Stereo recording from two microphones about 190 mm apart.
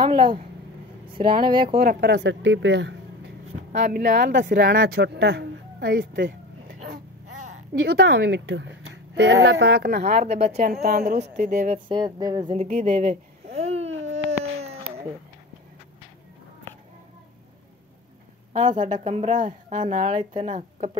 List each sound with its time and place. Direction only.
0.0 s a sound: 25° right (ahead or behind)
1.1 s speech: 25° right (ahead or behind)
1.8 s a woman's voice: 55° right (ahead or behind)
7.8 s a woman's voice: 60° right (ahead or behind)
10.2 s a woman's voice: 35° right (ahead or behind)
10.7 s a woman's voice: 45° right (ahead or behind)
11.9 s speech: 20° right (ahead or behind)
12.5 s speech: 35° right (ahead or behind)
14.6 s baby cry: 35° right (ahead or behind)
18.5 s a woman's voice: 40° right (ahead or behind)